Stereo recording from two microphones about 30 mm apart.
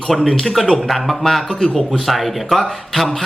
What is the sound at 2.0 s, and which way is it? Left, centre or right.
Speech, centre.